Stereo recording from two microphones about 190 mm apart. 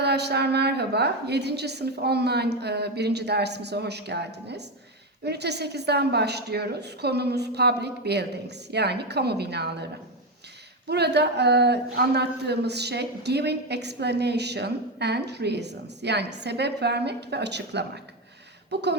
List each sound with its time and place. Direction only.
0.0 s a woman's voice: 60° right (ahead or behind)
10.8 s a woman's voice: 60° right (ahead or behind)